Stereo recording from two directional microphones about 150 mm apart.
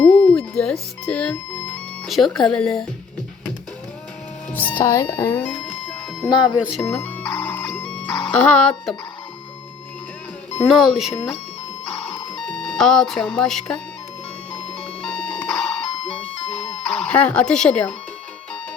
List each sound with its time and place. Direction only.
0.1 s music: 10° left (ahead or behind)
2.0 s speech: centre (ahead or behind)
4.5 s speech: 10° left (ahead or behind)
6.2 s speech: 30° left (ahead or behind)
6.8 s music: 10° left (ahead or behind)
10.7 s speech: centre (ahead or behind)
12.5 s speech: 5° left (ahead or behind)
15.0 s music: 5° left (ahead or behind)
16.8 s speech: 5° left (ahead or behind)